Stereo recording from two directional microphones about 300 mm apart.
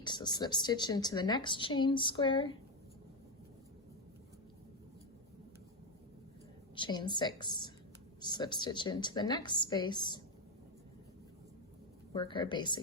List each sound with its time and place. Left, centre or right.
0.0 s speech: centre
6.7 s speech: centre
12.1 s speech: centre